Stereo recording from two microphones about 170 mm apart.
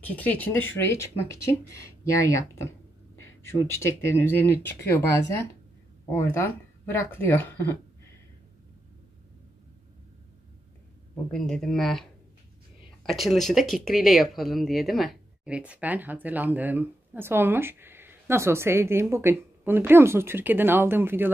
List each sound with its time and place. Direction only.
0.0 s speech: 10° left (ahead or behind)
3.2 s speech: 15° left (ahead or behind)
11.3 s speech: 5° left (ahead or behind); by 21.3 s 10° right (ahead or behind)